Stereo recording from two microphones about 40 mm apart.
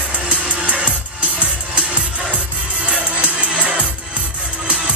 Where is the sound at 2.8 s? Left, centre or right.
Right.